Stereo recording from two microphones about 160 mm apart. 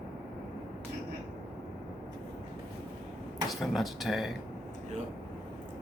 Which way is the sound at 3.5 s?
Centre (ahead or behind).